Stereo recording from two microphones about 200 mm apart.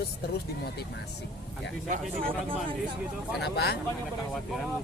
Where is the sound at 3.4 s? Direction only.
55° left (ahead or behind).